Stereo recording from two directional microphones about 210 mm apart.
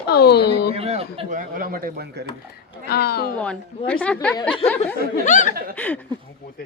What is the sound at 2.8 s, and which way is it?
Speech, 50° left (ahead or behind).